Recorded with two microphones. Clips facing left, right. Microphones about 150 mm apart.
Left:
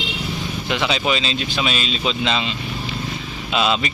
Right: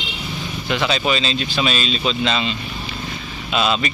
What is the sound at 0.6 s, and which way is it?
Speech, 15° left (ahead or behind).